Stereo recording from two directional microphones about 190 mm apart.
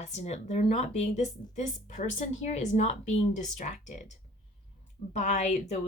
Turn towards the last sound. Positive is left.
turn(degrees=35)  # may be behind; listen again after turning